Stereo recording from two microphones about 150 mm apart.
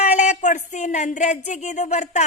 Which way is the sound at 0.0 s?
50° left (ahead or behind).